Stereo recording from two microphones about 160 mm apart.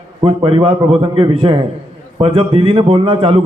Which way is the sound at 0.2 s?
35° right (ahead or behind).